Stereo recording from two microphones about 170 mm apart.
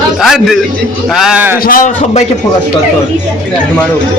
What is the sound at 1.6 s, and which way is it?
Speech, 55° left (ahead or behind).